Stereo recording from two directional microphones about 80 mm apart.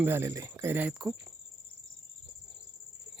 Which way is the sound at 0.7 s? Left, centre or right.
Right.